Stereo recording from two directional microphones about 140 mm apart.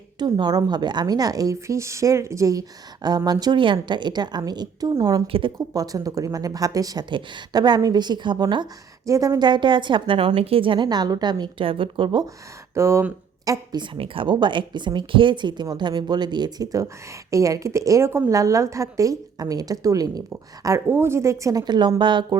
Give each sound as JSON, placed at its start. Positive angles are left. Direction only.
{"t": 0.2, "sound": "a woman's voice", "side_deg": -30}
{"t": 9.0, "sound": "a woman's voice", "side_deg": -20}
{"t": 12.7, "sound": "speech", "side_deg": -20}
{"t": 13.9, "sound": "a woman's voice", "side_deg": -40}